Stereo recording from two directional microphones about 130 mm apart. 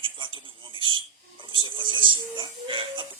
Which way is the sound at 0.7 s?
40° right (ahead or behind).